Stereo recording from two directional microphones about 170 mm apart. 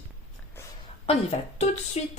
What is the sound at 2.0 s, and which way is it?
Speech, 40° left (ahead or behind).